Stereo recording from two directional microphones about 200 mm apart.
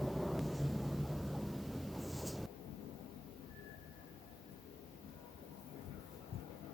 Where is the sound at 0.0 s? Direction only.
Centre (ahead or behind).